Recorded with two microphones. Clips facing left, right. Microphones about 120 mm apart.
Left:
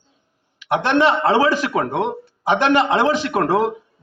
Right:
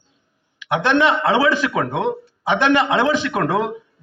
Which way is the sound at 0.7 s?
35° left (ahead or behind).